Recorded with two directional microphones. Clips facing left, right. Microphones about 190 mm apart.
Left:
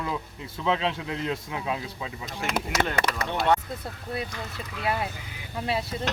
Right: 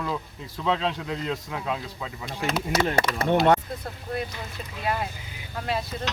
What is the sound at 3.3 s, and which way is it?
Speech, 45° right (ahead or behind).